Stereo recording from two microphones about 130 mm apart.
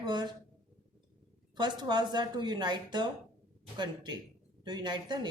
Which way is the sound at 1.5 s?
35° right (ahead or behind).